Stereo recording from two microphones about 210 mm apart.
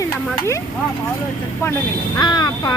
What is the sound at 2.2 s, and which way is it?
Speech, 20° left (ahead or behind).